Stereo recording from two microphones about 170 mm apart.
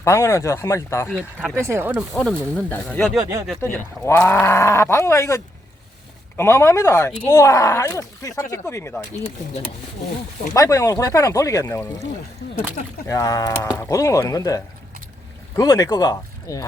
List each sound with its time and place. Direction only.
0.0 s speech: 15° left (ahead or behind)
1.1 s speech: centre (ahead or behind)
1.5 s speech: 15° right (ahead or behind)
2.1 s speech: 5° left (ahead or behind)
3.2 s speech: 20° right (ahead or behind)
3.6 s speech: 15° left (ahead or behind)
9.1 s speech: 40° left (ahead or behind)
10.5 s speech: 20° left (ahead or behind)
13.1 s speech: 20° left (ahead or behind)